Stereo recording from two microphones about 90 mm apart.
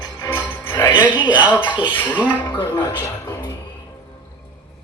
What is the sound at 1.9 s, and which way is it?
Speech, 25° left (ahead or behind).